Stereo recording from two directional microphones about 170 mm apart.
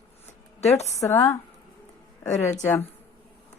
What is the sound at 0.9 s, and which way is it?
Speech, 15° left (ahead or behind).